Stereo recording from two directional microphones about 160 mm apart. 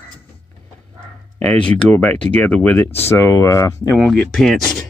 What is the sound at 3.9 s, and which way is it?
Speech, 5° left (ahead or behind).